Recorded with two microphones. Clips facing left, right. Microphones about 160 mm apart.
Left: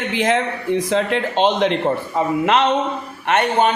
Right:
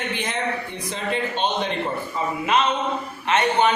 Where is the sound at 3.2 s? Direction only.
60° left (ahead or behind).